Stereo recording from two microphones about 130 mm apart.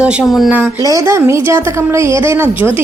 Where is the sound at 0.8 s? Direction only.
25° right (ahead or behind).